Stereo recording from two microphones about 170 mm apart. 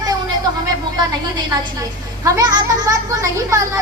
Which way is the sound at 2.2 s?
20° right (ahead or behind).